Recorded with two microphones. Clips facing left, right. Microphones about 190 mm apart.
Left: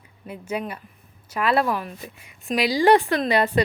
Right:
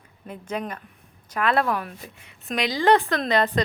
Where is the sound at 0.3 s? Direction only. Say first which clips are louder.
Left 1 dB; 10° left (ahead or behind).